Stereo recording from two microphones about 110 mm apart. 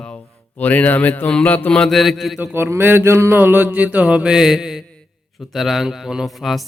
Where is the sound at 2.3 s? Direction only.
20° right (ahead or behind); by 4.8 s 5° right (ahead or behind).